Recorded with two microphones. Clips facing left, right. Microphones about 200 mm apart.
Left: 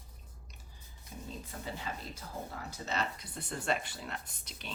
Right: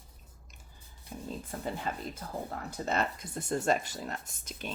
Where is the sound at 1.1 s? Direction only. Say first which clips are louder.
Right 5 dB; 50° right (ahead or behind).